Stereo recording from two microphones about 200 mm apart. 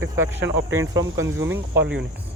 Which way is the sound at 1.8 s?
60° right (ahead or behind).